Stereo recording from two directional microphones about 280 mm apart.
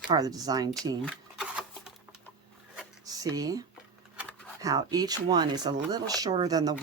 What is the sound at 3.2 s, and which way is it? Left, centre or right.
Speech, centre.